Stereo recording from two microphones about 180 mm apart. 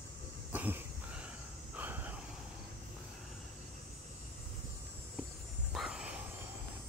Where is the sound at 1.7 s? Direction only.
10° right (ahead or behind).